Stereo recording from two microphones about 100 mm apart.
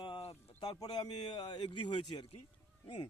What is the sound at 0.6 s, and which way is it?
Speech, 40° left (ahead or behind).